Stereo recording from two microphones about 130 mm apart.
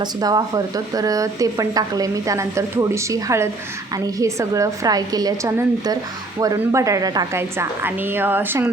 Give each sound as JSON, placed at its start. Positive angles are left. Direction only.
{"t": 0.0, "sound": "speech", "side_deg": -30}
{"t": 7.3, "sound": "a woman's voice", "side_deg": -20}